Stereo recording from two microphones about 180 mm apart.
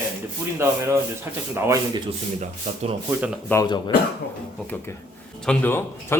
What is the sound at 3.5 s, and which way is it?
Speech, 20° left (ahead or behind).